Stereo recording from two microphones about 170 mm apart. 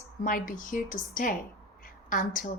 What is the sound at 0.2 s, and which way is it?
A woman's voice, 55° left (ahead or behind).